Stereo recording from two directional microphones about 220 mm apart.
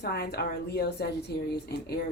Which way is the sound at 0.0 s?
50° left (ahead or behind).